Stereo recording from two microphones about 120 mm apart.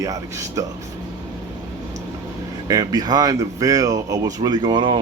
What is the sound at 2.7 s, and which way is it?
Speech, 35° right (ahead or behind).